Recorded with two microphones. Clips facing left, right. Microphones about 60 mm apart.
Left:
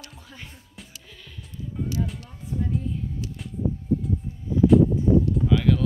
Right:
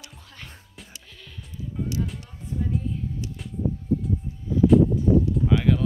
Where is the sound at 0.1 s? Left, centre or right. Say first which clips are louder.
Left 1 dB; centre.